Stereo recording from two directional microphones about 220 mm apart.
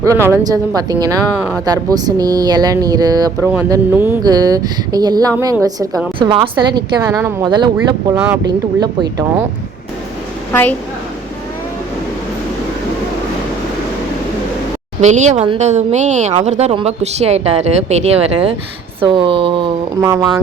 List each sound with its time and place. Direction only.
0.0 s speech: 15° right (ahead or behind)
10.5 s a woman's voice: 10° left (ahead or behind)
15.0 s speech: 30° right (ahead or behind); by 20.3 s 15° right (ahead or behind)